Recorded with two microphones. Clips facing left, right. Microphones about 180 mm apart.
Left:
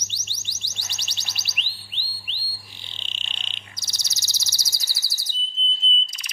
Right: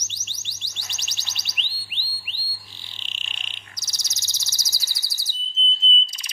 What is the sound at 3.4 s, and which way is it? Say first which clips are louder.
Bird: left 1 dB; 25° left (ahead or behind).